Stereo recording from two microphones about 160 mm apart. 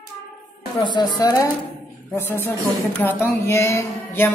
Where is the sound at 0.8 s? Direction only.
30° left (ahead or behind).